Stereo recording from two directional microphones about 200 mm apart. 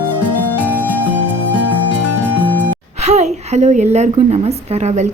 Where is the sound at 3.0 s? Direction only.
35° right (ahead or behind).